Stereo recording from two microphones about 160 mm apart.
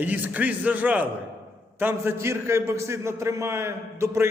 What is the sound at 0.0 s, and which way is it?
A man's voice, 10° right (ahead or behind).